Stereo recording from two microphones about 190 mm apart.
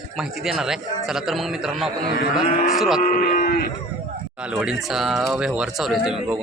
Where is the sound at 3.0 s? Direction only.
45° left (ahead or behind).